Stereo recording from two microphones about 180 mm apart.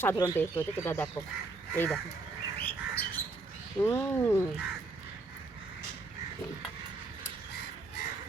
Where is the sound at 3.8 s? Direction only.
15° left (ahead or behind).